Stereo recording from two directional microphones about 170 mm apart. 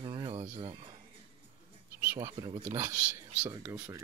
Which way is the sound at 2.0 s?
15° right (ahead or behind).